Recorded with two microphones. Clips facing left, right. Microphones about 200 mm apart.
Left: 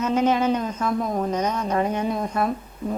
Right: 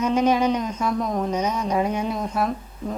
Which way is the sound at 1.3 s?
10° right (ahead or behind).